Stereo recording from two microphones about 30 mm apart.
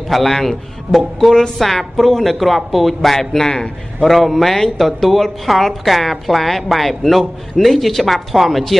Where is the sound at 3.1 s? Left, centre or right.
Centre.